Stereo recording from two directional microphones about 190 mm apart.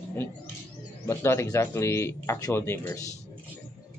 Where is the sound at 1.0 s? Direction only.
15° left (ahead or behind).